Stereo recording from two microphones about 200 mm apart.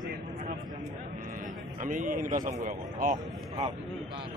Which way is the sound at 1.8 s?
40° right (ahead or behind).